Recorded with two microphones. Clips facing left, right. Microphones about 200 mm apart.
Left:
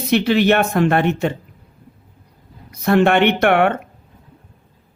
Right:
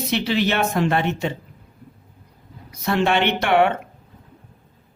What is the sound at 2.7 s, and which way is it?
Speech, 55° left (ahead or behind).